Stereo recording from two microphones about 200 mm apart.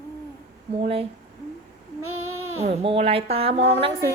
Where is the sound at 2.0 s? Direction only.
90° right.